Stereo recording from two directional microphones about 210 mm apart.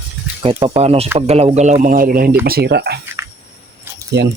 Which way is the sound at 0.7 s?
30° right (ahead or behind).